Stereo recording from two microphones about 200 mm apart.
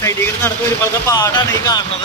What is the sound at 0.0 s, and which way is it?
Vehicle, 10° left (ahead or behind).